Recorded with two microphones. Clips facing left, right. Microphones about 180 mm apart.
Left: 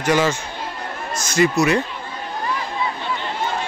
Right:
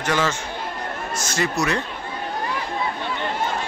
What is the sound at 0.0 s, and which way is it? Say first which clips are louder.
Speech: left 4 dB; 10° left (ahead or behind).